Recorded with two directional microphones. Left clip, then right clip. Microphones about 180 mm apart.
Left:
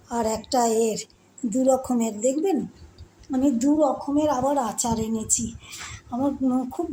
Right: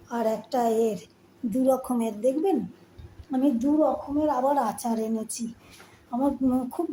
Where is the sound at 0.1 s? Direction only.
20° left (ahead or behind).